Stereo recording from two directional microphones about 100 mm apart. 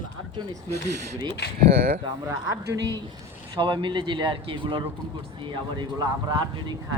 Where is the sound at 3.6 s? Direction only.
55° right (ahead or behind).